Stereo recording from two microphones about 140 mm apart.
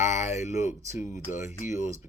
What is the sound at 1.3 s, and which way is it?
Speech, 55° left (ahead or behind).